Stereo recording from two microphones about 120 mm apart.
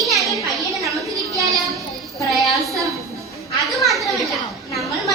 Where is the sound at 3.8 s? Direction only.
Centre (ahead or behind).